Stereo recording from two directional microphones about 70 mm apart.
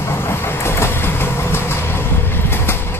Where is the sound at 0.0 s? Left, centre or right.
Left.